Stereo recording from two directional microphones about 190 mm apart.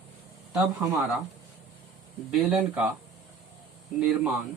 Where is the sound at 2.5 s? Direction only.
5° right (ahead or behind).